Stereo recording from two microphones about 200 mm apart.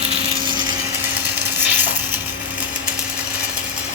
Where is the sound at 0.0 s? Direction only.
25° right (ahead or behind).